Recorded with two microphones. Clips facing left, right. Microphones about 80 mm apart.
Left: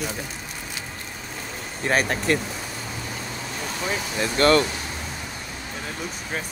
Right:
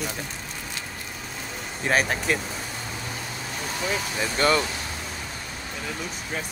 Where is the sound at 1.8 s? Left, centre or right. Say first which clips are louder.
Left 1 dB; centre.